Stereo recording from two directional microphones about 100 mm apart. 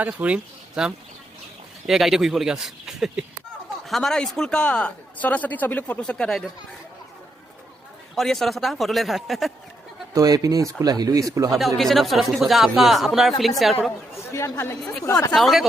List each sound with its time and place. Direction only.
0.0 s speech: 15° right (ahead or behind)
1.9 s speech: 5° right (ahead or behind)
8.1 s speech: 5° left (ahead or behind)
10.2 s speech: 35° right (ahead or behind)
11.5 s speech: centre (ahead or behind)
14.3 s speech: 30° left (ahead or behind)
15.1 s speech: 5° left (ahead or behind)